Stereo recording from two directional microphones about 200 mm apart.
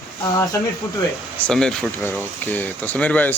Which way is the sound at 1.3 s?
5° left (ahead or behind).